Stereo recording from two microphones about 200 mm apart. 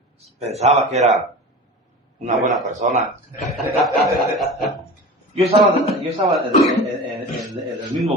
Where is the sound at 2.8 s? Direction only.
35° right (ahead or behind).